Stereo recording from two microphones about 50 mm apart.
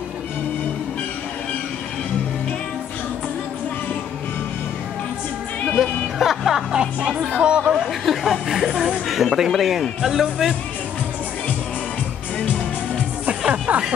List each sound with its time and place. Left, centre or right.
5.7 s speech: centre
7.8 s speech: centre
13.5 s music: right